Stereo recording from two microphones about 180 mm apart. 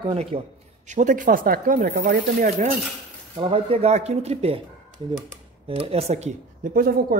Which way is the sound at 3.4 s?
30° right (ahead or behind).